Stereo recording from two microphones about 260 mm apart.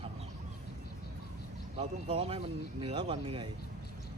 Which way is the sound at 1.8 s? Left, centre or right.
Right.